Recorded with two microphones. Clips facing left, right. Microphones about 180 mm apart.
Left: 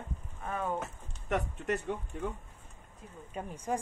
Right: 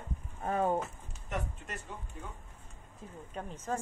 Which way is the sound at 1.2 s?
65° left (ahead or behind).